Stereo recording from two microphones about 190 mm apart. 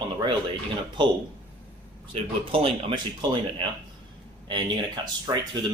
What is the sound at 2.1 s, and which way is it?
Speech, 30° right (ahead or behind).